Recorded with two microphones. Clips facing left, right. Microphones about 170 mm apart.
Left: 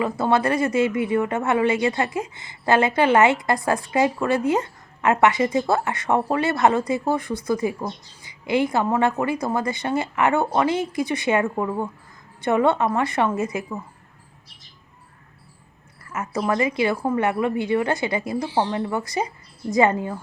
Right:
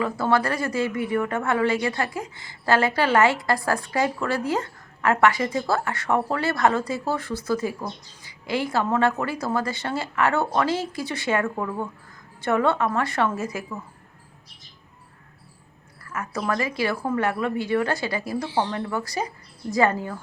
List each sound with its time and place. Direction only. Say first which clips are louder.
0.0 s a woman's voice: left 2 dB; 20° left (ahead or behind)
16.0 s a woman's voice: left 3 dB; 20° left (ahead or behind)